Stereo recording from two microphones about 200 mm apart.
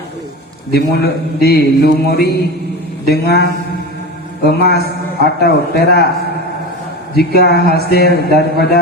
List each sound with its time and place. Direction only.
0.7 s a man's voice: 50° left (ahead or behind)
7.2 s a man's voice: 50° left (ahead or behind)